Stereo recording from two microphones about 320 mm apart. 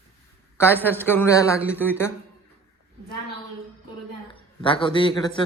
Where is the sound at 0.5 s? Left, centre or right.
Centre.